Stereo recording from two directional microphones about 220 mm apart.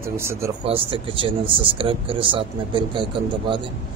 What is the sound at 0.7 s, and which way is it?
A man's voice, 25° right (ahead or behind).